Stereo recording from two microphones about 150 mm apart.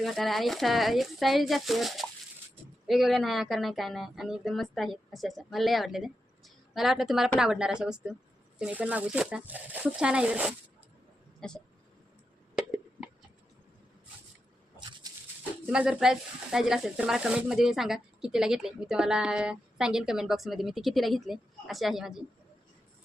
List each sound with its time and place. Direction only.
0.0 s speech: centre (ahead or behind)
11.3 s speech: 5° left (ahead or behind)
15.0 s dog: 25° right (ahead or behind)
15.6 s speech: 5° right (ahead or behind)